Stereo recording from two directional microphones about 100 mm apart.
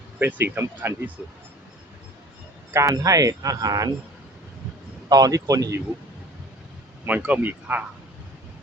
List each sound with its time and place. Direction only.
0.2 s speech: 20° right (ahead or behind)
2.7 s speech: 35° right (ahead or behind)
5.0 s speech: 40° right (ahead or behind)
7.2 s speech: 15° right (ahead or behind)